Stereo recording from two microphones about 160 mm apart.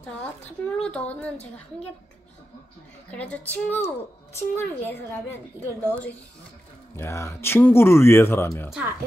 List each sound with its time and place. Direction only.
0.0 s a woman's voice: 10° left (ahead or behind)
3.1 s a woman's voice: 10° left (ahead or behind)